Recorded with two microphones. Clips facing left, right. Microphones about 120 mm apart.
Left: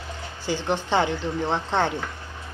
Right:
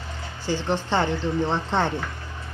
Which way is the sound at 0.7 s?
5° left (ahead or behind).